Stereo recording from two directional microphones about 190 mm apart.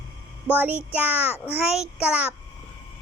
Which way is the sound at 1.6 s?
5° right (ahead or behind).